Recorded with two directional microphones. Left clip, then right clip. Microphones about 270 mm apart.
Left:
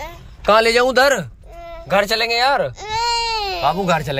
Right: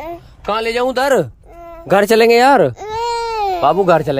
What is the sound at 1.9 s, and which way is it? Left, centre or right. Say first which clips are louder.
Speech: right 7 dB; right.